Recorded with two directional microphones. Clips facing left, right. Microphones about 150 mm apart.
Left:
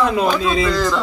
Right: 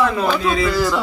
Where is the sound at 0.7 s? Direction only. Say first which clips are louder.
Even; 5° right (ahead or behind).